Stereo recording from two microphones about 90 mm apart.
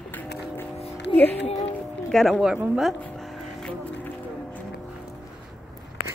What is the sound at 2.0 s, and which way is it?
Speech, 10° left (ahead or behind).